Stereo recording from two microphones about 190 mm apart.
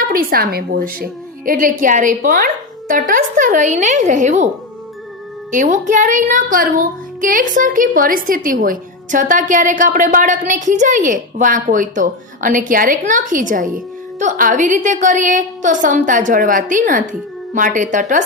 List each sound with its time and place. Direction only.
0.1 s speech: 50° right (ahead or behind)
5.5 s speech: 40° right (ahead or behind)